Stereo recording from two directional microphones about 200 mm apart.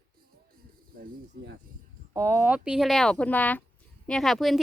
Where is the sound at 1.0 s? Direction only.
55° right (ahead or behind).